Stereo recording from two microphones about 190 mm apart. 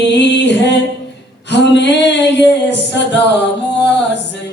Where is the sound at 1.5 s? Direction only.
65° left (ahead or behind).